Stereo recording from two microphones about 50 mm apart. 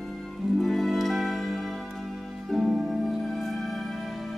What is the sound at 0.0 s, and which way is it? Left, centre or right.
Music, centre.